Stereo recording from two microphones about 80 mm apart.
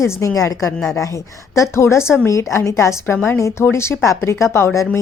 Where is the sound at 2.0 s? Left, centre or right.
Centre.